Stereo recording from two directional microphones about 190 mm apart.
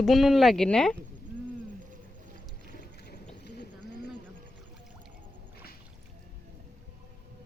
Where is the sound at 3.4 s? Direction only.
60° left (ahead or behind).